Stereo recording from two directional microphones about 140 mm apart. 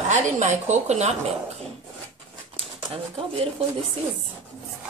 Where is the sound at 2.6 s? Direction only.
40° right (ahead or behind).